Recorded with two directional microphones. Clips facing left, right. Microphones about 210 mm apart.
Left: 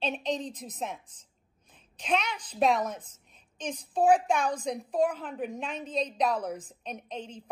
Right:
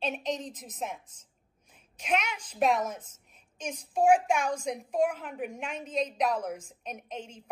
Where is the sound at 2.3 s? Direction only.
35° left (ahead or behind).